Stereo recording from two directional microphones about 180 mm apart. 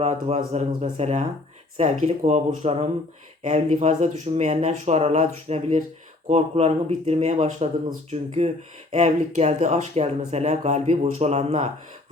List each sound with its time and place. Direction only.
0.0 s speech: 40° right (ahead or behind)